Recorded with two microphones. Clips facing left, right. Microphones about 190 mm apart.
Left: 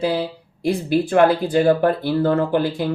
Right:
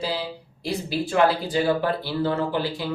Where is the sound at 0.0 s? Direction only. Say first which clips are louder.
Left 7 dB; 55° left (ahead or behind).